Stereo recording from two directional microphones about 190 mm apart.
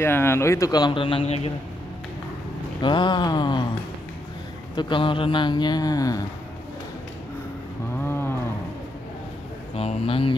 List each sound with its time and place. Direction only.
0.0 s speech: 10° left (ahead or behind); by 1.5 s 30° left (ahead or behind)
2.8 s speech: 25° left (ahead or behind)
4.7 s speech: 25° left (ahead or behind)
8.0 s cattle: 10° left (ahead or behind)
9.8 s speech: 30° left (ahead or behind)